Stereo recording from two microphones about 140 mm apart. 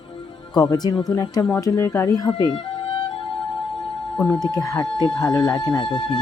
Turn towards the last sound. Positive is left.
turn(degrees=35)  # may be behind; listen again after turning